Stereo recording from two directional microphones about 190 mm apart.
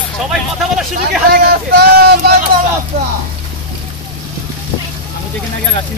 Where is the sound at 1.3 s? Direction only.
50° right (ahead or behind).